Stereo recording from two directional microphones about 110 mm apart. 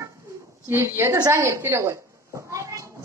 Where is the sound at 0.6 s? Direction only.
25° right (ahead or behind).